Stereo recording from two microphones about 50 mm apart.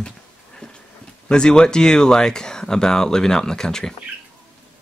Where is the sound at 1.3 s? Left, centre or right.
Centre.